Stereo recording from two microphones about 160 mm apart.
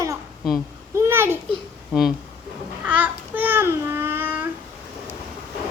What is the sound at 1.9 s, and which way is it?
Speech, 5° right (ahead or behind).